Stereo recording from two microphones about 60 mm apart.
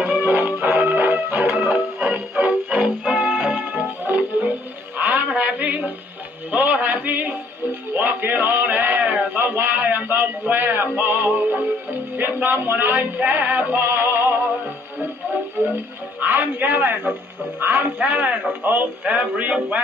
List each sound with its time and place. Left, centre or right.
0.0 s music: right
1.6 s music: centre
4.0 s music: right
4.9 s a sound: right
6.5 s music: right
16.2 s a sound: right
17.6 s a man's voice: right